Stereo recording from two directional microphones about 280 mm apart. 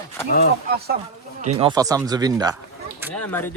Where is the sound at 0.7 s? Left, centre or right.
Right.